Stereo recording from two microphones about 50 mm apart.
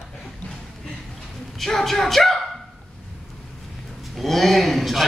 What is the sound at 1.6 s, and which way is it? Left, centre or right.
Dog, centre.